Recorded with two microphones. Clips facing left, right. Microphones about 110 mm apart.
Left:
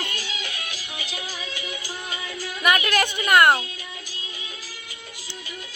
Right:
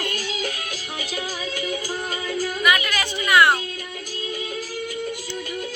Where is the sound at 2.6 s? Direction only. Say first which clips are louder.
Left 4 dB; 50° left (ahead or behind).